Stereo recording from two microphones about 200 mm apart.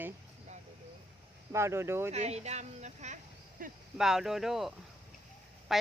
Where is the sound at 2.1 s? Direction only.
35° right (ahead or behind).